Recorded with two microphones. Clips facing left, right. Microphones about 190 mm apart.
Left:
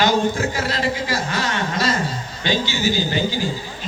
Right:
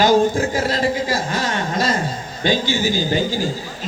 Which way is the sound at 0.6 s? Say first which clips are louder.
Right 3 dB; 45° right (ahead or behind).